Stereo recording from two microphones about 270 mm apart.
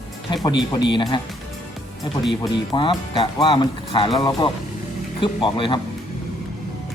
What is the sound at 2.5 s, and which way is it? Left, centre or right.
Speech, centre.